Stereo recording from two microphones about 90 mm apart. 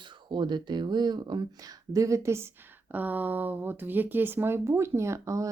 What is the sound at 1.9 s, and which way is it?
Speech, 35° right (ahead or behind).